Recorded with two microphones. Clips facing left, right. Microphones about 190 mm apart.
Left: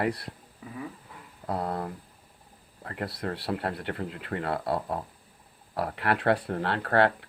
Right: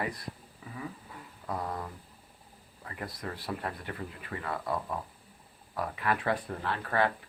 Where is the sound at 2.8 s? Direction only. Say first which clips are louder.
Left 6 dB; 60° left (ahead or behind).